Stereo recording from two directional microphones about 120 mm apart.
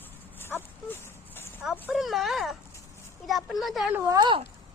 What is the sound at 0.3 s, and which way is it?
Dog, 15° left (ahead or behind).